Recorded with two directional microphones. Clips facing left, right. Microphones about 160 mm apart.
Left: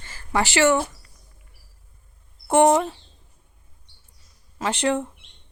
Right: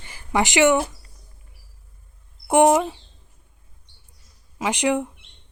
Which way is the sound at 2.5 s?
15° right (ahead or behind).